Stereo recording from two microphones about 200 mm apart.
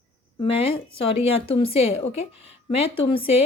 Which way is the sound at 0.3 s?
30° left (ahead or behind).